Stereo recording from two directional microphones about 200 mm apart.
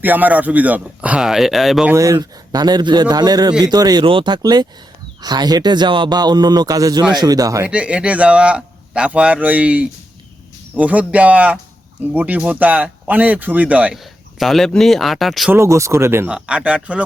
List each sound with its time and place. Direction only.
0.0 s a man's voice: 10° right (ahead or behind)
2.0 s a man's voice: 15° right (ahead or behind); by 15.5 s centre (ahead or behind)
15.5 s a man's voice: 15° right (ahead or behind)